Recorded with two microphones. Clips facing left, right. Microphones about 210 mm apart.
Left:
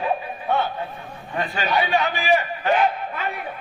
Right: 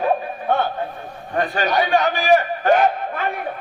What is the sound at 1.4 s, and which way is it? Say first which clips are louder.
A man's voice: right 4 dB; 45° right (ahead or behind).